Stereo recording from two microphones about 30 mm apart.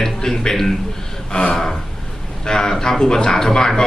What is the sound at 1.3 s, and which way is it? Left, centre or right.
A man's voice, left.